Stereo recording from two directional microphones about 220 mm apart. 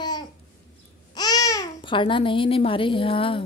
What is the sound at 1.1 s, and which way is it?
A child's voice, 15° left (ahead or behind).